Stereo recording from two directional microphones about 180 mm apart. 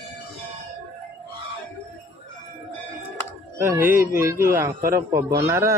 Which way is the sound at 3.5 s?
15° right (ahead or behind).